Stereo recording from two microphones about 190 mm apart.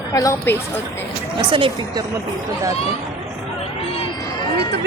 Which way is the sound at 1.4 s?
25° right (ahead or behind).